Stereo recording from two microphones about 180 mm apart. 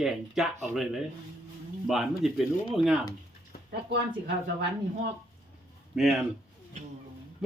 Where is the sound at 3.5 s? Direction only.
55° left (ahead or behind).